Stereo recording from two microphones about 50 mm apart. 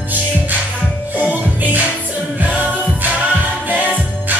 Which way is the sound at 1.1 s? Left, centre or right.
Right.